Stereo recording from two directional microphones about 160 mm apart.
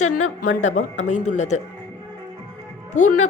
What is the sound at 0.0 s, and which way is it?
A woman's voice, 45° left (ahead or behind).